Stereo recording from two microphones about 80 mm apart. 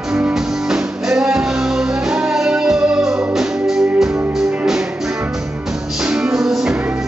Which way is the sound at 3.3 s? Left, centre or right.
Centre.